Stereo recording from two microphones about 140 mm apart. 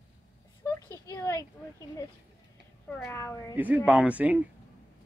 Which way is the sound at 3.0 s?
20° left (ahead or behind).